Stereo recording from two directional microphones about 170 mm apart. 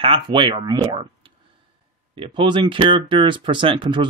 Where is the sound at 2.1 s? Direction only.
30° right (ahead or behind).